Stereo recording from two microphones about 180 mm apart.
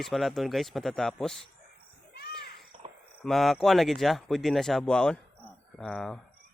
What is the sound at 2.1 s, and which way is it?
Children playing, 60° left (ahead or behind).